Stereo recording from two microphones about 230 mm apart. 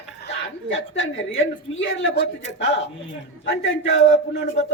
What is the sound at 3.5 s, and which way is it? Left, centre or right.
Speech, left.